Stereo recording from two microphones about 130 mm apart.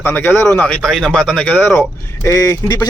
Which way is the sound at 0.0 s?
15° left (ahead or behind).